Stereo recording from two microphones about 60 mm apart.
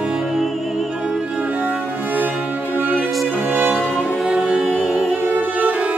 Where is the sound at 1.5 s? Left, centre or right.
Right.